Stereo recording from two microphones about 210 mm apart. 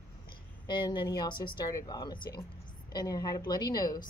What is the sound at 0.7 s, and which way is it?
A woman's voice, 20° left (ahead or behind).